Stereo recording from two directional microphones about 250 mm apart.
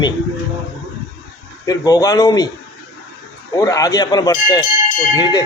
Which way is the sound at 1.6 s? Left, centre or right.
Centre.